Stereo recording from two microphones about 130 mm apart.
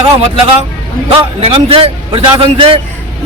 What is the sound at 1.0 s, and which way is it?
A man's voice, 45° right (ahead or behind).